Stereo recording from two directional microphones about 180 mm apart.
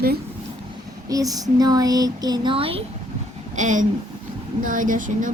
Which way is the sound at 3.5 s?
45° right (ahead or behind).